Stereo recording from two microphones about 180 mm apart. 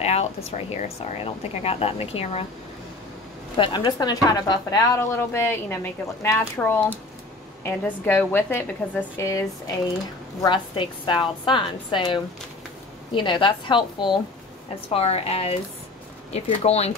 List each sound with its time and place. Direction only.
0.0 s speech: 35° left (ahead or behind)
3.5 s a woman's voice: 25° left (ahead or behind)
10.4 s a woman's voice: 25° left (ahead or behind)